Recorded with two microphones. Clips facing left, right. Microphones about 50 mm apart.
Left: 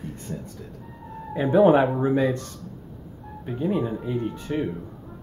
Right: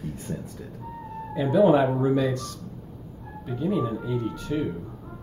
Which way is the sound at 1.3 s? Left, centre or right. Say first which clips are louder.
Left 2 dB; left.